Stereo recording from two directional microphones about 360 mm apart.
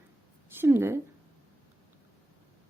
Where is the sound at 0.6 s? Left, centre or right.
Centre.